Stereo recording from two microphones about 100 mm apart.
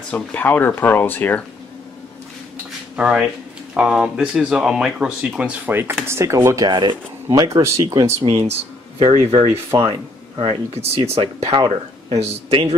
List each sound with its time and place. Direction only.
0.1 s speech: 15° left (ahead or behind)
3.0 s speech: 10° right (ahead or behind)
5.7 s speech: 25° right (ahead or behind); by 7.0 s 50° right (ahead or behind)
7.2 s speech: 35° right (ahead or behind)
7.8 s speech: 50° right (ahead or behind)
8.2 s speech: 70° right (ahead or behind)